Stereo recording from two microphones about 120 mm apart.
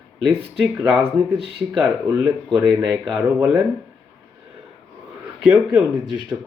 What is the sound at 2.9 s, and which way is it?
Speech, 5° right (ahead or behind).